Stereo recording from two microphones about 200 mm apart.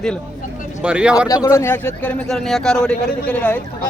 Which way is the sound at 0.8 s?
5° right (ahead or behind).